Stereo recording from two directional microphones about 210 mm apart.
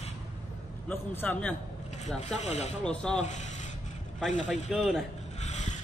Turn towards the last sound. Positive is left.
turn(degrees=35)  # may be behind; listen again after turning